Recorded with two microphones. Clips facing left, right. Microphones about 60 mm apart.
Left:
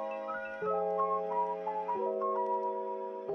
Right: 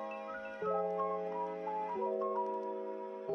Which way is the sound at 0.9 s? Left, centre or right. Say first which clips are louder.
Left 5 dB; left.